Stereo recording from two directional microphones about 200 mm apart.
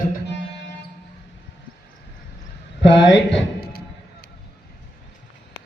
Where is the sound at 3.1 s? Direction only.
55° left (ahead or behind).